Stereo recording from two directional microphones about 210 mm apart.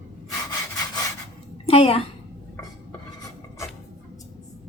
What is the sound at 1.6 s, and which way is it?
Speech, 25° left (ahead or behind).